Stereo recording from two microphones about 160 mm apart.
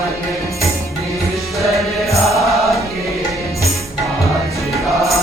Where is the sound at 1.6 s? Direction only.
Centre (ahead or behind).